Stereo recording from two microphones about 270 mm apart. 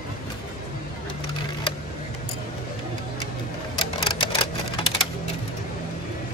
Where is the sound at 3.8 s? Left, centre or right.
Centre.